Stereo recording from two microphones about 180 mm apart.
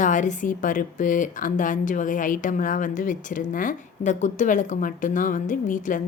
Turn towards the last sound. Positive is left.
turn(degrees=45)  # may be behind; listen again after turning